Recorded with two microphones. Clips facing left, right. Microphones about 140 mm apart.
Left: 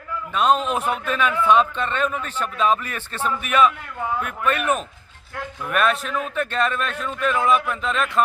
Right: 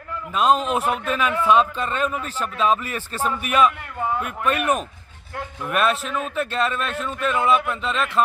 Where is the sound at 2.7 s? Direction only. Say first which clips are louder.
Right 1 dB; 5° right (ahead or behind).